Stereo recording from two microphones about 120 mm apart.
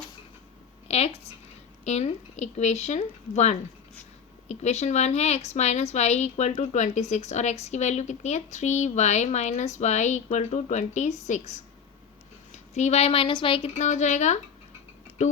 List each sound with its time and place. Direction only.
0.9 s a woman's voice: 60° left (ahead or behind)
13.7 s a woman's voice: 80° left